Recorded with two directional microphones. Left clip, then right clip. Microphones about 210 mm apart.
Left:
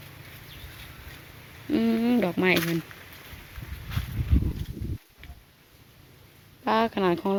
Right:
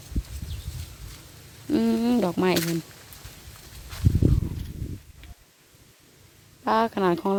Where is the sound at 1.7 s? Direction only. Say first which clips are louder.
Right 1 dB; 15° right (ahead or behind).